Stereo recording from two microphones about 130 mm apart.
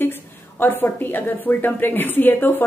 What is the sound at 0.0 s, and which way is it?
A woman's voice, 15° left (ahead or behind).